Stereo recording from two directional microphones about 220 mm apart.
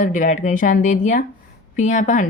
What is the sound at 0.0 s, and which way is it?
Speech, 35° left (ahead or behind).